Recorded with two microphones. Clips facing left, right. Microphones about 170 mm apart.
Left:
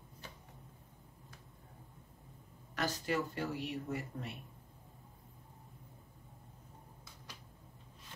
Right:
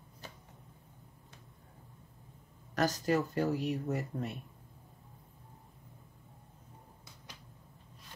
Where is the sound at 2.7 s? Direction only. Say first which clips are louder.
Right 6 dB; 40° right (ahead or behind).